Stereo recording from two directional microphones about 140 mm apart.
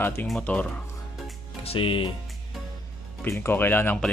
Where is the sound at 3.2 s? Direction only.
15° left (ahead or behind).